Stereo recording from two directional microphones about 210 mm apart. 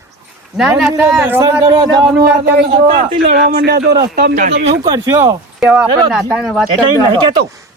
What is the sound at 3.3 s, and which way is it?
A man's voice, 50° right (ahead or behind).